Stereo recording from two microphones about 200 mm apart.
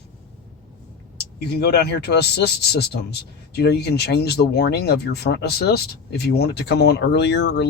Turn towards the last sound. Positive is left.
turn(degrees=60)  # may be behind; listen again after turning